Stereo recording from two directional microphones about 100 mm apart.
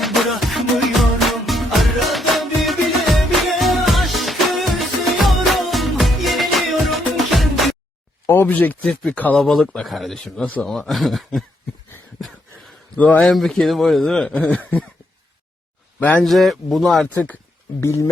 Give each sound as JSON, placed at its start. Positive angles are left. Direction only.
{"t": 0.0, "sound": "music", "side_deg": 0}
{"t": 8.3, "sound": "speech", "side_deg": 20}
{"t": 13.0, "sound": "speech", "side_deg": 15}
{"t": 13.3, "sound": "speech", "side_deg": 0}
{"t": 16.0, "sound": "speech", "side_deg": 15}
{"t": 16.2, "sound": "speech", "side_deg": 0}
{"t": 17.7, "sound": "speech", "side_deg": 30}